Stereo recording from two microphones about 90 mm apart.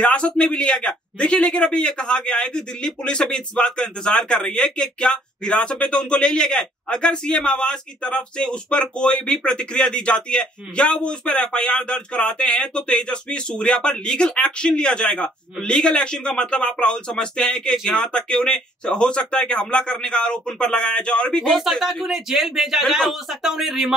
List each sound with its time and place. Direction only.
0.0 s a man's voice: 10° left (ahead or behind); by 23.9 s 5° right (ahead or behind)